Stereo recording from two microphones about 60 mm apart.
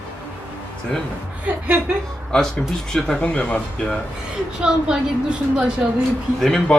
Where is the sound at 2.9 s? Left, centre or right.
Centre.